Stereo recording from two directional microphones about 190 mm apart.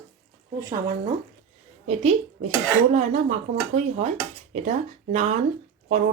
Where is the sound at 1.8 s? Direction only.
35° right (ahead or behind).